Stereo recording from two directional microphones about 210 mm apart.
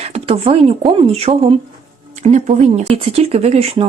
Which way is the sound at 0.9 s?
25° right (ahead or behind).